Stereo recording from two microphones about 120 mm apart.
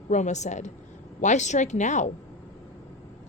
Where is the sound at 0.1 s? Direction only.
80° left.